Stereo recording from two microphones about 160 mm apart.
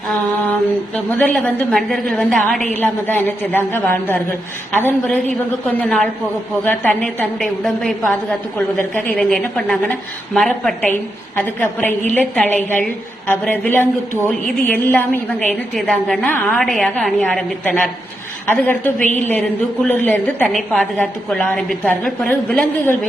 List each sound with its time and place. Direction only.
0.9 s a woman's voice: 10° left (ahead or behind)
18.9 s a woman's voice: 50° left (ahead or behind)
19.3 s a woman's voice: 10° left (ahead or behind)